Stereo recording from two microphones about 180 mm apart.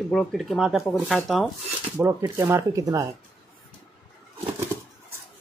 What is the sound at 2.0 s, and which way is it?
Speech, 15° right (ahead or behind).